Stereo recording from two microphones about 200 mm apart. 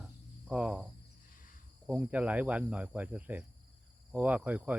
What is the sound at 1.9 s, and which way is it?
Speech, 5° right (ahead or behind).